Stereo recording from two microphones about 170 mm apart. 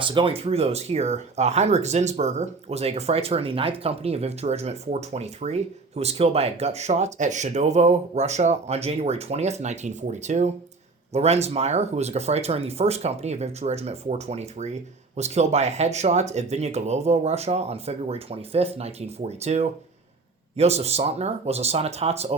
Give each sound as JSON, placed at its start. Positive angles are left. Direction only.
{"t": 0.0, "sound": "speech", "side_deg": -30}